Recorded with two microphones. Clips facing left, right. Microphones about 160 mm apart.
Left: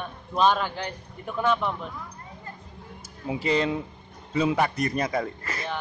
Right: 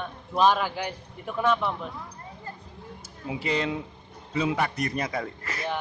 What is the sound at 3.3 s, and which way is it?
A man's voice, 35° left (ahead or behind).